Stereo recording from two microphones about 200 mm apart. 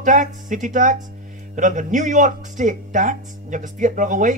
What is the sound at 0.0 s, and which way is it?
Speech, 40° right (ahead or behind).